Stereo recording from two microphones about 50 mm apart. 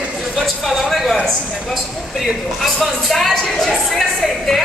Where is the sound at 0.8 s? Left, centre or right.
Centre.